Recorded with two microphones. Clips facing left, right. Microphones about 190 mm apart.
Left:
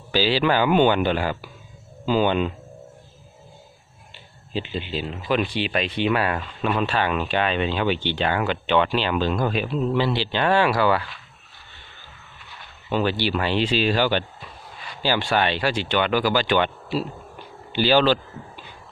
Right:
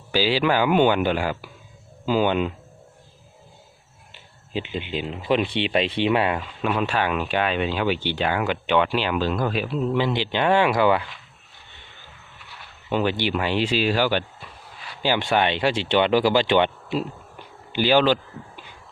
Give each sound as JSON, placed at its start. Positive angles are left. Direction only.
{"t": 0.1, "sound": "speech", "side_deg": -10}
{"t": 4.5, "sound": "speech", "side_deg": -15}
{"t": 6.4, "sound": "speech", "side_deg": -10}
{"t": 9.9, "sound": "speech", "side_deg": -15}
{"t": 12.9, "sound": "speech", "side_deg": -15}